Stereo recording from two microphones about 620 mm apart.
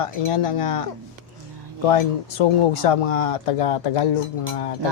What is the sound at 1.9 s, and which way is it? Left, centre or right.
Speech, left.